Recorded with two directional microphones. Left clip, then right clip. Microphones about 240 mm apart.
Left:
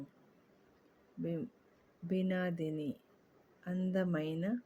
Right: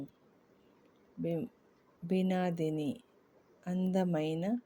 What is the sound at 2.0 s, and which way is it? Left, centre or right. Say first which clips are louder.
Speech: right 3 dB; centre.